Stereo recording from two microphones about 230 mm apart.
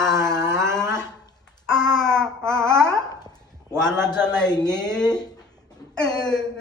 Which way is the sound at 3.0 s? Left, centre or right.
Centre.